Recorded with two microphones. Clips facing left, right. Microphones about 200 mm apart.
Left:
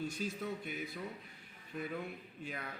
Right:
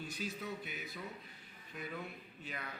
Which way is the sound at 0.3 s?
50° left (ahead or behind).